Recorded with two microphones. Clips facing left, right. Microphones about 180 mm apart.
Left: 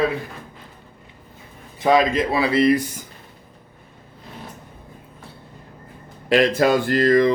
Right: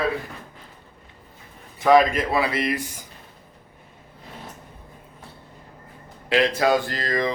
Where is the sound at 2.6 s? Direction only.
35° left (ahead or behind).